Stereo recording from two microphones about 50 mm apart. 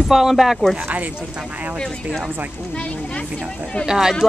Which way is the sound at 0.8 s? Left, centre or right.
Right.